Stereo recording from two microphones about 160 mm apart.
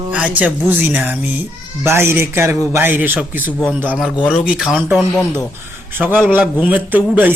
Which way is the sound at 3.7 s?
10° right (ahead or behind).